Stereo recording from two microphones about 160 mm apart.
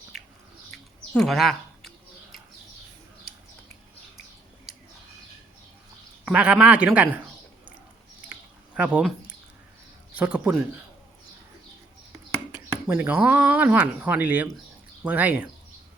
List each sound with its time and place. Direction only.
0.1 s a sound: centre (ahead or behind)
0.7 s chirp: centre (ahead or behind)
6.2 s a man's voice: 5° right (ahead or behind)
8.3 s a sound: 10° right (ahead or behind)
10.2 s a man's voice: 5° right (ahead or behind)
12.1 s a man's voice: 15° right (ahead or behind)